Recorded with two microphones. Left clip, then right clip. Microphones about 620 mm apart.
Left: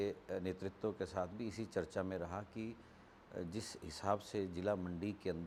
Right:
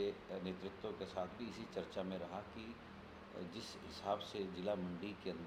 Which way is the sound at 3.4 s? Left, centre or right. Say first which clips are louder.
Left 2 dB; left.